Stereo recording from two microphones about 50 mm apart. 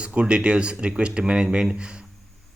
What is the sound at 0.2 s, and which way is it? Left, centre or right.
A man's voice, right.